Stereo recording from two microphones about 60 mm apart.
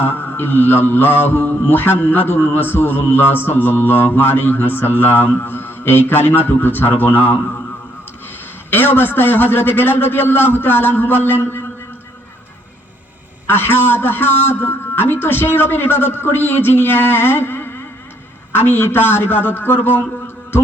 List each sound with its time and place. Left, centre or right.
0.0 s mantra: left
8.7 s mantra: left
13.5 s mantra: left